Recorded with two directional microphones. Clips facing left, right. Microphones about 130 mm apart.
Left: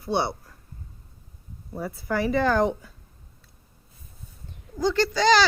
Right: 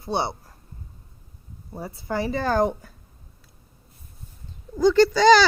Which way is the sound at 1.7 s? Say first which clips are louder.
Left 1 dB; 25° right (ahead or behind).